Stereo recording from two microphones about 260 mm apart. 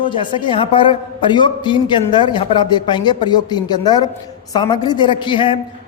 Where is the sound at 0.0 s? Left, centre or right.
Centre.